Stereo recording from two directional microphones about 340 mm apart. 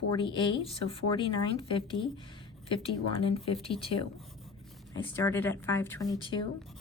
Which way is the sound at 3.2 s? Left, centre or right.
Centre.